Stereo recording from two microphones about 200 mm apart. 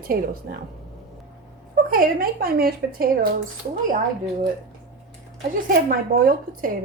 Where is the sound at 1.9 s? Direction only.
45° right (ahead or behind).